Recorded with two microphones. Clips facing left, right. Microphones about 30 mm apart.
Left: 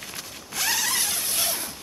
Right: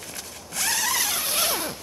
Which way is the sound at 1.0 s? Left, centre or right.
Centre.